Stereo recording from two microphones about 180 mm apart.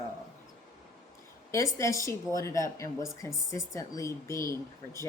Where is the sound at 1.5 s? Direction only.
15° left (ahead or behind).